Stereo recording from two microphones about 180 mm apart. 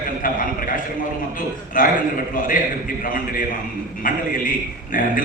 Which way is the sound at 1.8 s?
50° left (ahead or behind).